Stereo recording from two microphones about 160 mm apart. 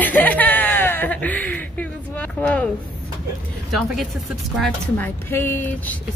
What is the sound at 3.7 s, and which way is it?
Speech, centre (ahead or behind).